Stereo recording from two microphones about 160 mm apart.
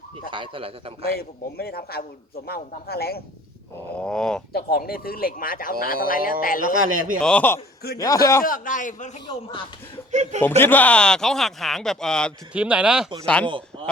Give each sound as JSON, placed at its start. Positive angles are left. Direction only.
{"t": 0.3, "sound": "speech", "side_deg": -30}
{"t": 1.2, "sound": "speech", "side_deg": 75}
{"t": 3.9, "sound": "speech", "side_deg": 5}
{"t": 4.5, "sound": "a man's voice", "side_deg": 70}
{"t": 6.8, "sound": "a man's voice", "side_deg": -60}
{"t": 7.2, "sound": "a man's voice", "side_deg": 5}
{"t": 7.9, "sound": "a man's voice", "side_deg": 20}
{"t": 8.4, "sound": "a man's voice", "side_deg": 55}
{"t": 9.2, "sound": "speech", "side_deg": 35}
{"t": 10.1, "sound": "speech", "side_deg": -45}
{"t": 10.6, "sound": "speech", "side_deg": 10}
{"t": 12.5, "sound": "speech", "side_deg": -5}
{"t": 13.2, "sound": "a man's voice", "side_deg": 5}